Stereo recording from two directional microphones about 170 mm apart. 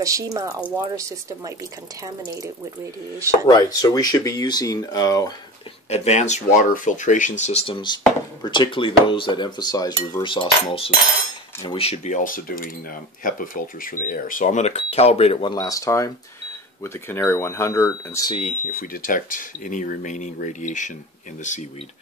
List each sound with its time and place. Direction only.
0.0 s speech: 20° right (ahead or behind)
3.4 s speech: 20° left (ahead or behind)
5.9 s speech: 40° left (ahead or behind)
15.5 s speech: 20° left (ahead or behind)
18.3 s speech: 45° left (ahead or behind)